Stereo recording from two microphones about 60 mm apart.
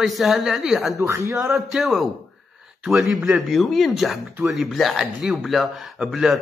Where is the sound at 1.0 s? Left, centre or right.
Right.